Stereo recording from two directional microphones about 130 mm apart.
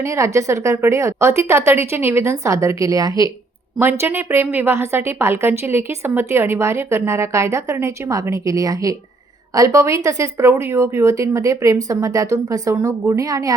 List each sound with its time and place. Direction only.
0.0 s a woman's voice: 25° right (ahead or behind)